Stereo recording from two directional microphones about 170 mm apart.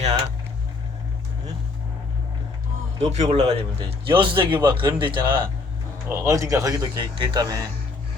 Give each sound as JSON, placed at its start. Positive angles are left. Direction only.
{"t": 3.0, "sound": "a man's voice", "side_deg": -40}
{"t": 6.1, "sound": "a man's voice", "side_deg": -15}